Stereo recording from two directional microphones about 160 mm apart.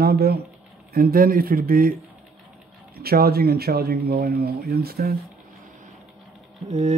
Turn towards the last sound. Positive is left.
turn(degrees=-45)  # may be behind; listen again after turning